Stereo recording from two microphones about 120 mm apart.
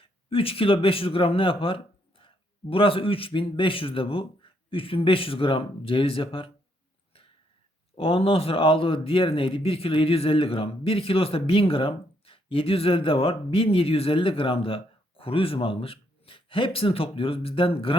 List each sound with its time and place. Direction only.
0.0 s speech: 50° left (ahead or behind)
7.9 s a man's voice: 50° left (ahead or behind)